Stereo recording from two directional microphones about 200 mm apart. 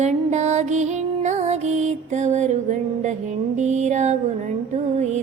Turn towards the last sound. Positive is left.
turn(degrees=-35)  # may be behind; listen again after turning